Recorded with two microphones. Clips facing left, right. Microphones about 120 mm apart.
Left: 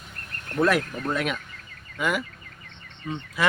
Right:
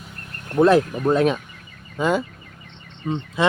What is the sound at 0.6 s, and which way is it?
Speech, 25° right (ahead or behind).